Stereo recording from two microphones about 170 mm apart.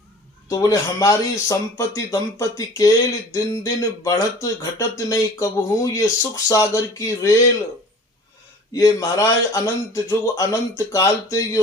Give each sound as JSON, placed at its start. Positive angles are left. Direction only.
{"t": 0.4, "sound": "speech", "side_deg": 20}
{"t": 8.7, "sound": "speech", "side_deg": 20}